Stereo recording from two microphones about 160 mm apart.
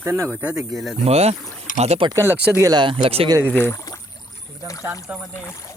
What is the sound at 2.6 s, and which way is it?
Speech, 25° right (ahead or behind).